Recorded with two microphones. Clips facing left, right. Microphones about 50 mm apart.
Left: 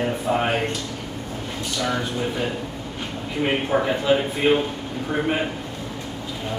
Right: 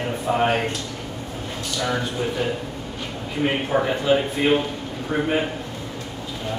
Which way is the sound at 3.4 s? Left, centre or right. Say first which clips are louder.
Even; centre.